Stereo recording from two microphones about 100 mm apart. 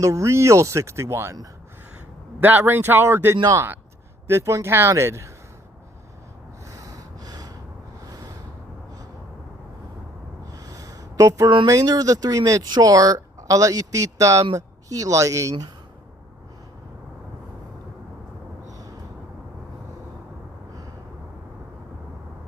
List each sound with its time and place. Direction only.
0.0 s speech: 30° right (ahead or behind)
2.4 s speech: 20° right (ahead or behind)
6.7 s snort: 35° right (ahead or behind)
10.5 s a sound: 35° right (ahead or behind)
11.4 s speech: 45° right (ahead or behind)
18.7 s a sound: 35° right (ahead or behind)